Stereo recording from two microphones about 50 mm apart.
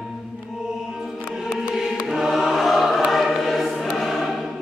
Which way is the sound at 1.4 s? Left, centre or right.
Centre.